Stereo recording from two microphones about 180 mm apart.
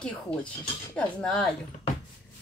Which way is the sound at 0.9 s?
5° left (ahead or behind).